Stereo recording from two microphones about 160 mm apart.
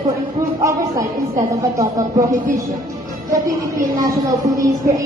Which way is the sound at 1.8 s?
20° right (ahead or behind).